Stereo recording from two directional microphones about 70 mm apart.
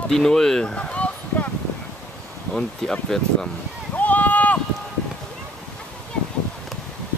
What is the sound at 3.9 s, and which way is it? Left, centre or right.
Run, left.